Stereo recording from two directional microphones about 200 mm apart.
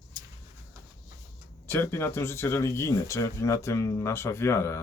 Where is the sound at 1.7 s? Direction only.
10° left (ahead or behind).